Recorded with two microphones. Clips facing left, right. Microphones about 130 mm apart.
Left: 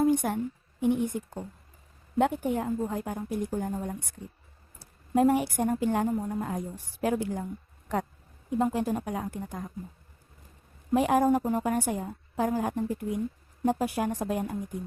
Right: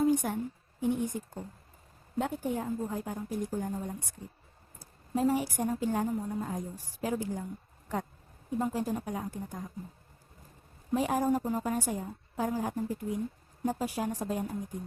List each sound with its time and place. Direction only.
0.0 s a sound: 65° left (ahead or behind)
0.8 s a woman's voice: 65° left (ahead or behind)
8.4 s a woman's voice: 70° left (ahead or behind)
10.9 s a woman's voice: 65° left (ahead or behind)